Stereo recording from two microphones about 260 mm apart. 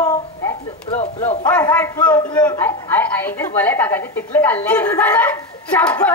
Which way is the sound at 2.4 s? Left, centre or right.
Centre.